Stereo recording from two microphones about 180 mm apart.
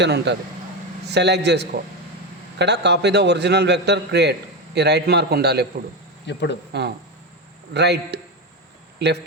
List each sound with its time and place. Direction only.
0.0 s a man's voice: 75° right (ahead or behind)
6.2 s speech: 75° left (ahead or behind)
7.7 s a man's voice: 70° right (ahead or behind)